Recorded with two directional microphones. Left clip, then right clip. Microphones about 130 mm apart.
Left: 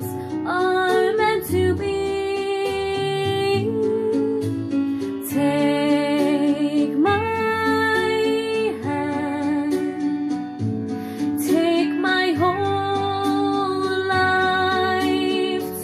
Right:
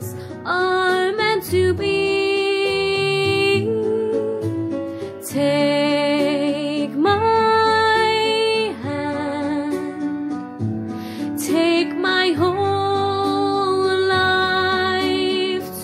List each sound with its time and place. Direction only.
0.5 s music: 30° right (ahead or behind)
5.5 s music: 25° right (ahead or behind)
7.4 s music: 40° right (ahead or behind)
11.5 s music: 35° right (ahead or behind)
13.7 s music: 30° right (ahead or behind)